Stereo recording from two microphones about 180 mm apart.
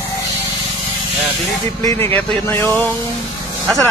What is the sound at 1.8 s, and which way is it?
Speech, 15° left (ahead or behind).